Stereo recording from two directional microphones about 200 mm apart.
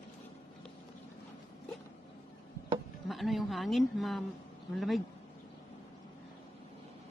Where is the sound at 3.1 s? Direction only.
Centre (ahead or behind).